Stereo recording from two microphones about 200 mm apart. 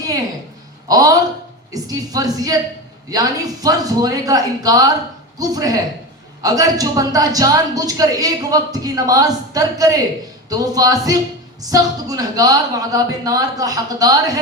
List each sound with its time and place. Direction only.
0.9 s a woman's voice: 20° right (ahead or behind)